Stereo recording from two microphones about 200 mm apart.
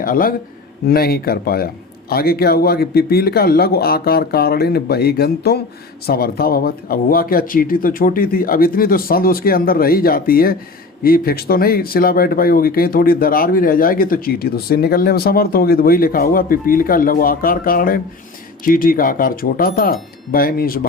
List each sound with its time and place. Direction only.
0.0 s speech: 45° left (ahead or behind)